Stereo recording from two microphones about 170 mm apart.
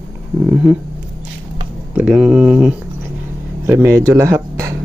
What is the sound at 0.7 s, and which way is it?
Speech, centre (ahead or behind).